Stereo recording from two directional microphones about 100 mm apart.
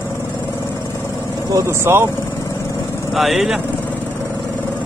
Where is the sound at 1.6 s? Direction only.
25° right (ahead or behind).